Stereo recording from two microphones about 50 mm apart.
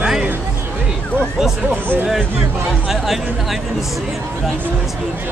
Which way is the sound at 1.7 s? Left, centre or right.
Right.